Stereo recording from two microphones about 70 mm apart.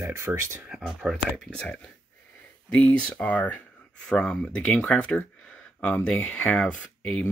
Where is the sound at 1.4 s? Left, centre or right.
Centre.